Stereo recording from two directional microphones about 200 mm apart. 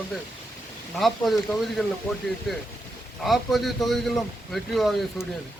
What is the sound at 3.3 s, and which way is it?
A man's voice, centre (ahead or behind).